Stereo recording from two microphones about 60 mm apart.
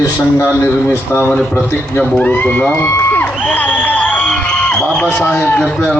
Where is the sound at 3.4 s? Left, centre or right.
Left.